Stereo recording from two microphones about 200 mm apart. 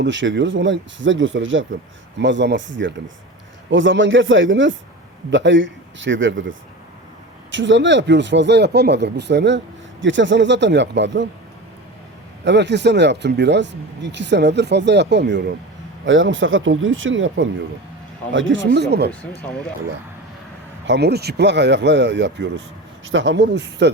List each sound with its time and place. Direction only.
0.0 s speech: 65° right (ahead or behind)
12.5 s speech: 60° right (ahead or behind)
16.0 s speech: 70° right (ahead or behind); by 19.1 s 55° right (ahead or behind)
19.4 s speech: 5° left (ahead or behind)
20.8 s speech: 60° right (ahead or behind)